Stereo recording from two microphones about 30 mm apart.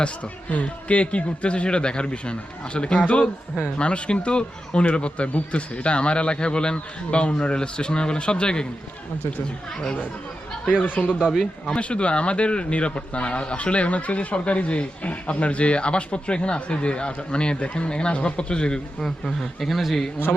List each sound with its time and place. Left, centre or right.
0.5 s speech: left
10.8 s speech: left
11.6 s speech: left
19.5 s speech: centre